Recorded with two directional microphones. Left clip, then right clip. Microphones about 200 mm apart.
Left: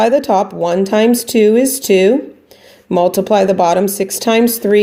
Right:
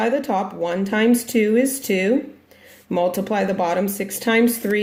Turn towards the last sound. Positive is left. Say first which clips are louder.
# left 7 dB
turn(degrees=35)  # may be behind; listen again after turning